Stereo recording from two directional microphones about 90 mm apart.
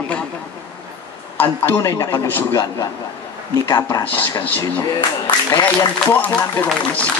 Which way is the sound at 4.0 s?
20° left (ahead or behind).